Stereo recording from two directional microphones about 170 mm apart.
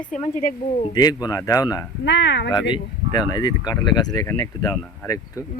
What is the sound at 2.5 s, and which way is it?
Speech, 25° left (ahead or behind).